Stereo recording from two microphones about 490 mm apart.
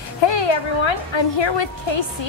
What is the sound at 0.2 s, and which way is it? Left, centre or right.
A woman's voice, left.